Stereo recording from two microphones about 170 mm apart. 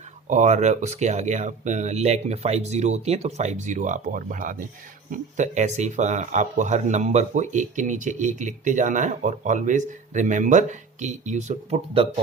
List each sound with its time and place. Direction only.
0.3 s speech: 45° right (ahead or behind)